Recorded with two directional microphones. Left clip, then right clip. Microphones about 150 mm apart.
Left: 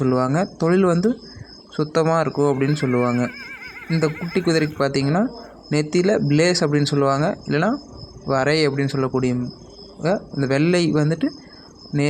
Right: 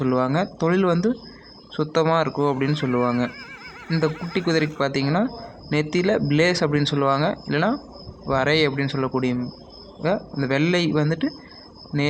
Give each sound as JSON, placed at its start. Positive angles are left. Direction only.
{"t": 0.0, "sound": "speech", "side_deg": 35}
{"t": 3.8, "sound": "snicker", "side_deg": 25}
{"t": 4.3, "sound": "speech", "side_deg": 35}